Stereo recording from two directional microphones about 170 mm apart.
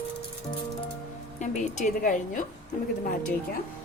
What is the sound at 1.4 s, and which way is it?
A woman's voice, 45° left (ahead or behind).